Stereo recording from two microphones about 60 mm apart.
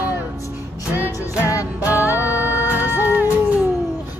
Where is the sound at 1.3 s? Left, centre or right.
Left.